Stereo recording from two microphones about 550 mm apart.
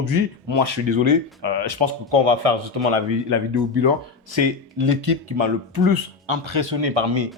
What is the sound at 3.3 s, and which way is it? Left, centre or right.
Speech, right.